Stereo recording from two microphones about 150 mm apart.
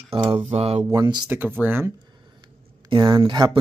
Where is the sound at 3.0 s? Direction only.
20° right (ahead or behind).